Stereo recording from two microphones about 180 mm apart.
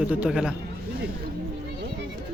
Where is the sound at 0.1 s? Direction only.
5° right (ahead or behind).